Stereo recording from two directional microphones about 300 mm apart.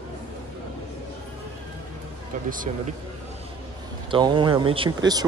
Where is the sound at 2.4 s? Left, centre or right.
Right.